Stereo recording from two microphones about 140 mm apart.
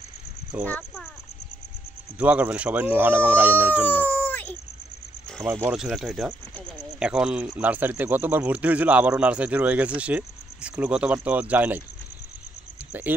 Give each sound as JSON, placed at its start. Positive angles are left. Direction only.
{"t": 0.7, "sound": "speech", "side_deg": 10}
{"t": 2.1, "sound": "speech", "side_deg": -10}
{"t": 3.9, "sound": "a sound", "side_deg": 10}
{"t": 5.4, "sound": "speech", "side_deg": -15}
{"t": 5.8, "sound": "speech", "side_deg": 0}